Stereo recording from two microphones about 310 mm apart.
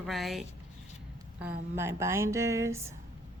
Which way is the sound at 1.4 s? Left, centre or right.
Centre.